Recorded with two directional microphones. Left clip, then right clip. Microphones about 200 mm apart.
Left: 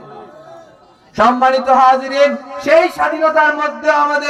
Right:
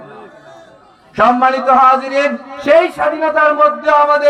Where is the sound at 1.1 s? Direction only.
25° left (ahead or behind).